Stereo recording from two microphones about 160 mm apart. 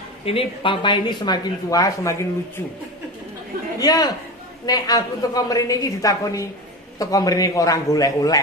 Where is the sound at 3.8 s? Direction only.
25° left (ahead or behind).